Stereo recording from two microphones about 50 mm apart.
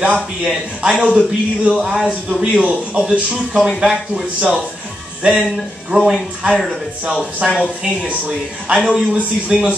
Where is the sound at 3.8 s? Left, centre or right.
Centre.